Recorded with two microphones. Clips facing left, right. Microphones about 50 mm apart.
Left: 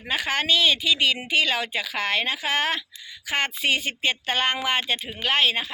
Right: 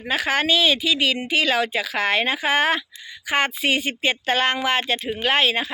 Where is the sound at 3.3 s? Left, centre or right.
Centre.